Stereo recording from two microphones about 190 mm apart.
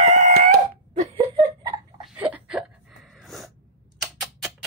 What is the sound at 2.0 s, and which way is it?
Sneeze, 5° right (ahead or behind).